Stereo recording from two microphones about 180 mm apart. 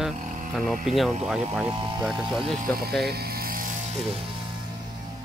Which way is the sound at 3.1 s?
60° right (ahead or behind).